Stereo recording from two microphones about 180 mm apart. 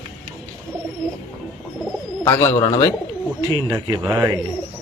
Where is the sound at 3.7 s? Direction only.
10° right (ahead or behind).